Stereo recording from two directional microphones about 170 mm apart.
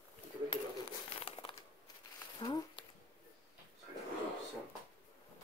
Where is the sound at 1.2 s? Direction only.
30° left (ahead or behind).